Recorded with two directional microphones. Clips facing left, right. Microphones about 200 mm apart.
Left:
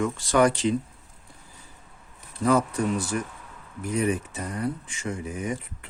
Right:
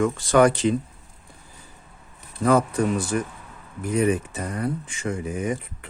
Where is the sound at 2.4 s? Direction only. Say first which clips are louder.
Right 3 dB; 55° right (ahead or behind).